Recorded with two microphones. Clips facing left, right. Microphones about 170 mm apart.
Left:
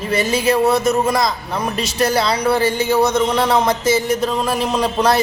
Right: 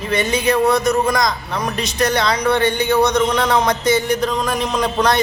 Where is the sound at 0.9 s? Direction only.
5° left (ahead or behind).